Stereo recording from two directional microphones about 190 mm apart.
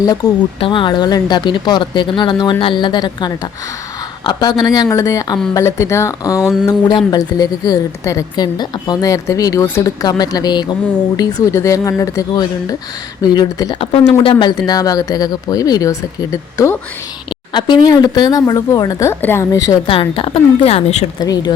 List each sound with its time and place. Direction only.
0.6 s a woman's voice: 25° left (ahead or behind)
17.5 s a woman's voice: 25° left (ahead or behind)
19.9 s a woman's voice: 30° left (ahead or behind)
21.2 s a woman's voice: 20° left (ahead or behind)